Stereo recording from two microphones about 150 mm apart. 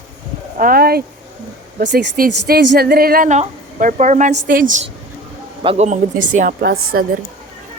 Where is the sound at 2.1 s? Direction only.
80° right.